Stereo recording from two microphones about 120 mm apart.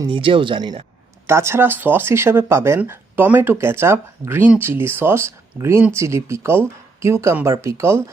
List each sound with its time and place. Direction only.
0.1 s speech: 45° right (ahead or behind)
1.3 s speech: 20° right (ahead or behind)